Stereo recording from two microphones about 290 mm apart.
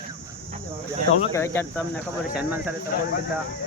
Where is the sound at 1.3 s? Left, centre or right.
Centre.